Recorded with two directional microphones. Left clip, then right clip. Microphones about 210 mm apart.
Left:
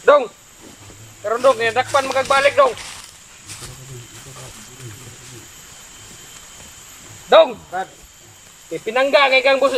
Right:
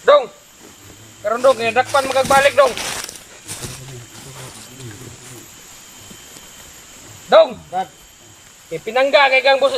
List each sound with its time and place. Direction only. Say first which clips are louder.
0.0 s a sound: right 1 dB; 5° left (ahead or behind)
1.2 s speech: right 1 dB; centre (ahead or behind)
2.7 s speech: right 9 dB; 50° right (ahead or behind)
7.3 s speech: even; centre (ahead or behind)
8.8 s speech: right 1 dB; centre (ahead or behind)